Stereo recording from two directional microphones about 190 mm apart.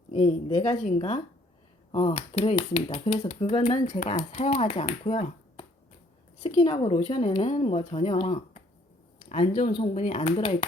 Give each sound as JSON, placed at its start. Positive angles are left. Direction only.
{"t": 0.1, "sound": "speech", "side_deg": 30}